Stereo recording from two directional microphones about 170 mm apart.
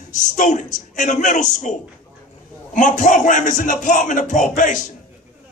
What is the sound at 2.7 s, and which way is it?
A man's voice, 50° left (ahead or behind).